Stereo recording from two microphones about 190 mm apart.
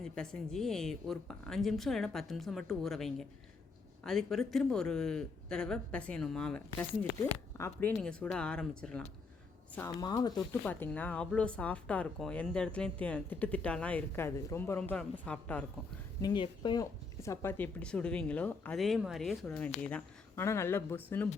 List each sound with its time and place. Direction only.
0.0 s speech: 5° left (ahead or behind)
9.7 s speech: 20° left (ahead or behind)
10.7 s speech: 10° left (ahead or behind)
16.2 s speech: 25° left (ahead or behind)